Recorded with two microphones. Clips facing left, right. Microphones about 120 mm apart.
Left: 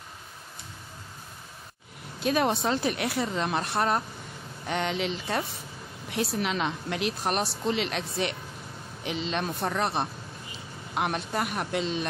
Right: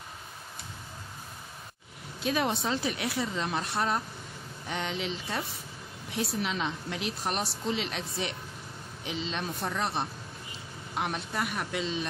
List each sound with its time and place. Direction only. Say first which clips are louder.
2.2 s a woman's voice: left 4 dB; 50° left (ahead or behind)